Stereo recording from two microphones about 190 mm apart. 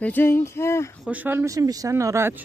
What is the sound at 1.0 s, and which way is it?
Speech, 10° right (ahead or behind).